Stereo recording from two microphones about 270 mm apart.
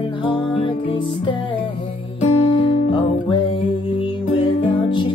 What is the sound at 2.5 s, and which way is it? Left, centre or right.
Music, centre.